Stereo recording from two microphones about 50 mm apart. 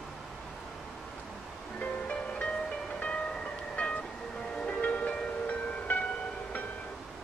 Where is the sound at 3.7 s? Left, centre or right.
Left.